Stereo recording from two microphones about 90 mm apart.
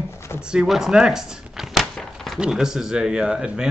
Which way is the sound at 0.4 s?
10° right (ahead or behind).